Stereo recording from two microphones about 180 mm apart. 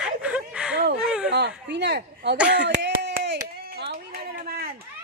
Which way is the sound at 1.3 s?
70° right (ahead or behind).